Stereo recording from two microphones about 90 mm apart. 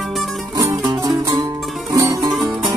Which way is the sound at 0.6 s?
40° right (ahead or behind).